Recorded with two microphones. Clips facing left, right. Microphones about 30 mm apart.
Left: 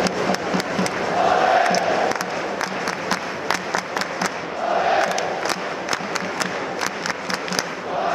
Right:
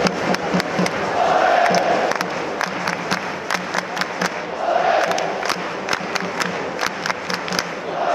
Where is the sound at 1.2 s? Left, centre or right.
Centre.